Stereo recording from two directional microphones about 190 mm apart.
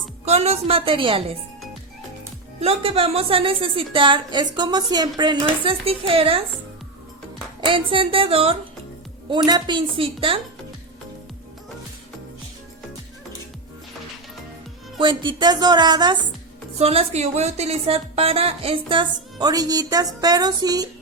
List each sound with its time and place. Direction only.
0.3 s a woman's voice: 35° right (ahead or behind)
2.6 s a woman's voice: 30° right (ahead or behind)
7.6 s a woman's voice: 25° right (ahead or behind)
14.9 s a woman's voice: 25° right (ahead or behind)